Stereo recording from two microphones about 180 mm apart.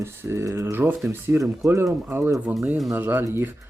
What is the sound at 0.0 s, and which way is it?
Speech, 15° right (ahead or behind).